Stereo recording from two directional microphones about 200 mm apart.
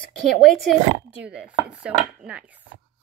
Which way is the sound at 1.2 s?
5° right (ahead or behind).